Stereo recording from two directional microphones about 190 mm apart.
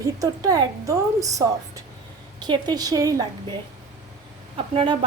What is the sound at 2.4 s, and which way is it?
Speech, 20° right (ahead or behind).